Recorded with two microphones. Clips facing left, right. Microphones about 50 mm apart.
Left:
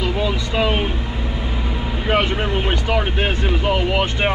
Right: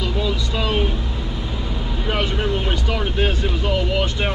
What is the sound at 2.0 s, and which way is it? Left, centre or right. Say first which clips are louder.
Speech: left 3 dB; left.